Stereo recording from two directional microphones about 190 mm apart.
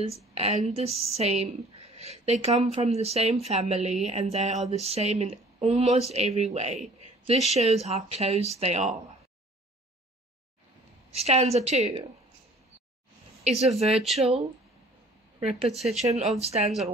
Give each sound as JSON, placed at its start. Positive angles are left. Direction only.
{"t": 0.0, "sound": "speech", "side_deg": -30}
{"t": 11.1, "sound": "speech", "side_deg": -35}
{"t": 13.4, "sound": "speech", "side_deg": -35}
{"t": 13.7, "sound": "speech", "side_deg": 0}
{"t": 15.4, "sound": "speech", "side_deg": -35}